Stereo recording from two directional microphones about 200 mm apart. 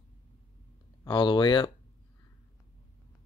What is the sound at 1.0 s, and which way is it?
Speech, 20° left (ahead or behind).